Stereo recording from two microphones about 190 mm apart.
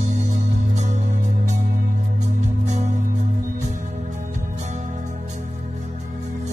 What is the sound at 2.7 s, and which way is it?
Music, 40° right (ahead or behind).